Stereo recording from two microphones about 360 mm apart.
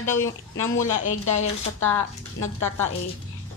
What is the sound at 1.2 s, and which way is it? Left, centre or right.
Speech, left.